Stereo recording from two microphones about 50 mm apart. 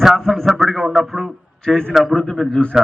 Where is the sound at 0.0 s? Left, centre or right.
Centre.